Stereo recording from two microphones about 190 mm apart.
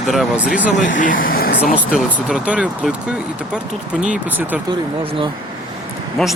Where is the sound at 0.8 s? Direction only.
45° left (ahead or behind).